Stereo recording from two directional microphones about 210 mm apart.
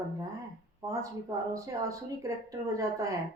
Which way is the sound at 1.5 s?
15° right (ahead or behind).